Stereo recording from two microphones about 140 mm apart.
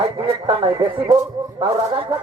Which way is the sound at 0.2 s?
40° right (ahead or behind).